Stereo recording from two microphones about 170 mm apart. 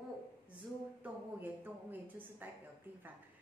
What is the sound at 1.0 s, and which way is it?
A woman's voice, 10° right (ahead or behind).